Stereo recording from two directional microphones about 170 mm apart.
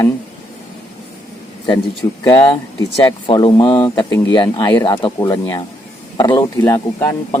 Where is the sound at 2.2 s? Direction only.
25° left (ahead or behind).